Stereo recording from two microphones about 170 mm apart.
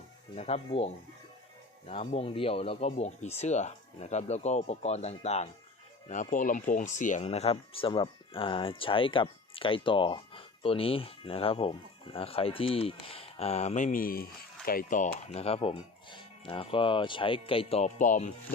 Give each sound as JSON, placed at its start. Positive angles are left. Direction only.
{"t": 0.3, "sound": "speech", "side_deg": 35}
{"t": 1.9, "sound": "speech", "side_deg": 35}